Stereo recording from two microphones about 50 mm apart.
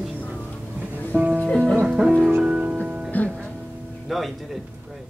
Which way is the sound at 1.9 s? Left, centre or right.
Right.